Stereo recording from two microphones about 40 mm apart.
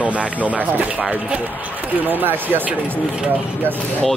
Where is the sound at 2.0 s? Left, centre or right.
Right.